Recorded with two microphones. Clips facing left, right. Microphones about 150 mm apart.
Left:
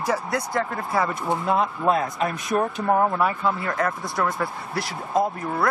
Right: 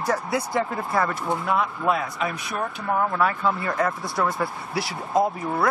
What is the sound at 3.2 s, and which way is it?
Speech, 5° left (ahead or behind).